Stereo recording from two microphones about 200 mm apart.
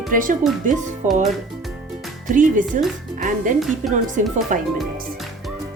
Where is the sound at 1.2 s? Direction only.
Centre (ahead or behind).